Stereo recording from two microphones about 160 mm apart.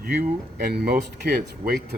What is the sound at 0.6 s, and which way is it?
Speech, 75° right (ahead or behind).